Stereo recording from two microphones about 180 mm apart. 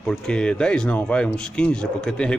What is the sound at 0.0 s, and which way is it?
Speech, 5° left (ahead or behind).